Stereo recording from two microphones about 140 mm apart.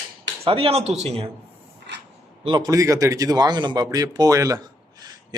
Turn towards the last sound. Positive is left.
turn(degrees=-30)  # may be behind; listen again after turning